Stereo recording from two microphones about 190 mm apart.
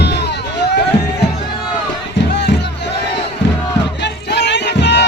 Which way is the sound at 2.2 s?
65° left (ahead or behind).